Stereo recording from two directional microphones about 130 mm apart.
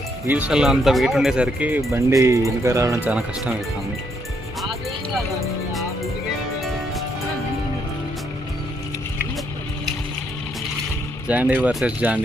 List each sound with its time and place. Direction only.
0.3 s speech: 10° right (ahead or behind)
1.9 s speech: 20° right (ahead or behind)
3.0 s speech: 10° right (ahead or behind)
11.3 s speech: 10° right (ahead or behind)